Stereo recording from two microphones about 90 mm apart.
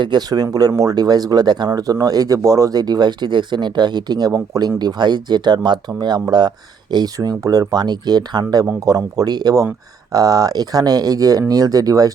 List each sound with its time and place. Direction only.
0.0 s speech: 50° right (ahead or behind)
4.3 s speech: 40° right (ahead or behind)
4.8 s speech: 55° right (ahead or behind)